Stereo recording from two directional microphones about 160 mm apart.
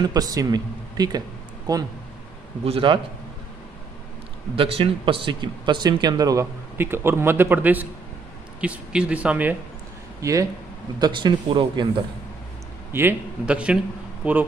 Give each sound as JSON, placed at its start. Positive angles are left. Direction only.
{"t": 0.0, "sound": "speech", "side_deg": -25}
{"t": 2.6, "sound": "a man's voice", "side_deg": -35}
{"t": 4.6, "sound": "speech", "side_deg": -35}
{"t": 11.0, "sound": "speech", "side_deg": -30}
{"t": 12.9, "sound": "speech", "side_deg": -10}